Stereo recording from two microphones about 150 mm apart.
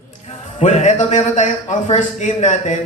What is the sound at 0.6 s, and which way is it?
A man's voice, 50° left (ahead or behind).